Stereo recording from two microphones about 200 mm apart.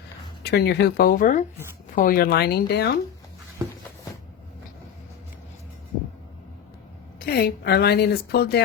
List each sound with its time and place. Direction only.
0.4 s a woman's voice: 55° left (ahead or behind)
7.2 s a woman's voice: 50° left (ahead or behind)